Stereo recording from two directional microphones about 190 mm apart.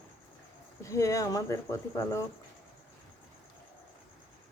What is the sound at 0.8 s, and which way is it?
Speech, 15° left (ahead or behind).